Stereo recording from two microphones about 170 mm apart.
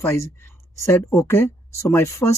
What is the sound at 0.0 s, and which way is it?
Speech, 15° left (ahead or behind).